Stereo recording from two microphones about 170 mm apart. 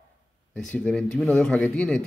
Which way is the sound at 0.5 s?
5° left (ahead or behind).